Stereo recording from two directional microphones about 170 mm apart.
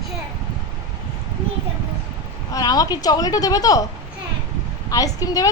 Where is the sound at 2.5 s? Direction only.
20° left (ahead or behind).